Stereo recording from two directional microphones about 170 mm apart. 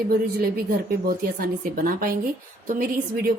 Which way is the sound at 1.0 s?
60° right (ahead or behind).